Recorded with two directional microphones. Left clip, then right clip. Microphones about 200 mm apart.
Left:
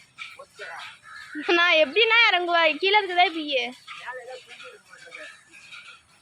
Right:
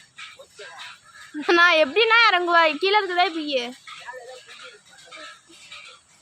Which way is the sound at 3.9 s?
45° right (ahead or behind).